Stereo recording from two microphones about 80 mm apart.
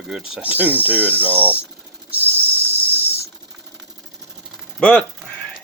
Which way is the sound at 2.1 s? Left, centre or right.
Right.